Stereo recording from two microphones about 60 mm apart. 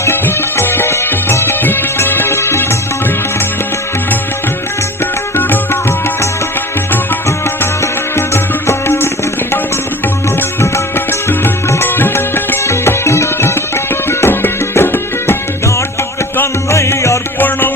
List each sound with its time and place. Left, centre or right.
0.0 s music: left
7.8 s music: left
10.6 s music: left
12.6 s music: left
16.4 s music: left